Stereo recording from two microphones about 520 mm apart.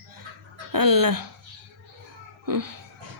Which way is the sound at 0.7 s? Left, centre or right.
Right.